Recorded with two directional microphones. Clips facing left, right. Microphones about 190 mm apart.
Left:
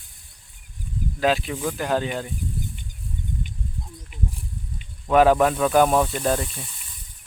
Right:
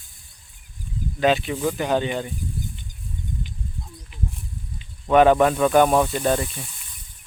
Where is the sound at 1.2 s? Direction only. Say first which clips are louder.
Right 2 dB; centre (ahead or behind).